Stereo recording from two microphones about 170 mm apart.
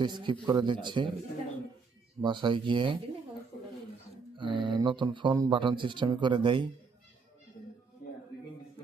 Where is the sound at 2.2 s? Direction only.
25° right (ahead or behind).